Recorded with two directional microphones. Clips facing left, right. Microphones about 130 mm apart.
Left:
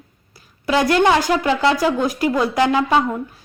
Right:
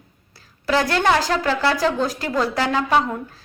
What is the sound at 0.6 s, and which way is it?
Speech, 20° left (ahead or behind).